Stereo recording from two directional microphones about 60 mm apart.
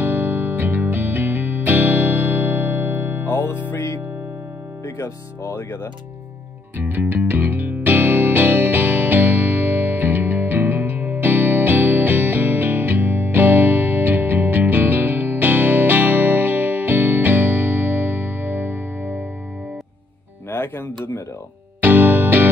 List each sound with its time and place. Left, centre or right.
0.0 s music: right
3.3 s music: left
4.8 s speech: left
6.8 s music: right
20.5 s music: left
21.8 s music: right